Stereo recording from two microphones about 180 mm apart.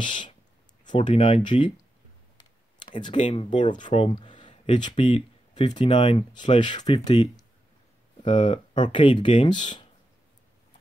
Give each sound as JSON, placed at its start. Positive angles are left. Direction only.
{"t": 0.0, "sound": "speech", "side_deg": 25}
{"t": 3.0, "sound": "speech", "side_deg": 30}